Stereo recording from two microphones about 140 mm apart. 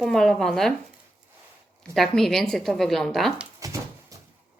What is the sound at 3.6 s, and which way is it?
Dog, 25° right (ahead or behind).